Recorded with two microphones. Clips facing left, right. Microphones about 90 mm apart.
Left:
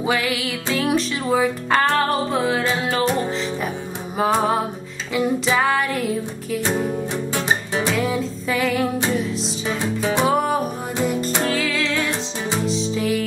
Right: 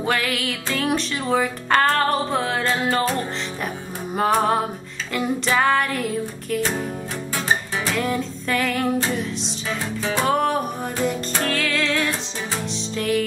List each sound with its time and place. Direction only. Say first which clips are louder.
0.0 s music: left 1 dB; 5° left (ahead or behind)
7.3 s music: even; 20° left (ahead or behind)
7.9 s music: right 1 dB; 5° left (ahead or behind)
9.8 s music: left 3 dB; 20° left (ahead or behind)
10.2 s music: right 1 dB; 5° left (ahead or behind)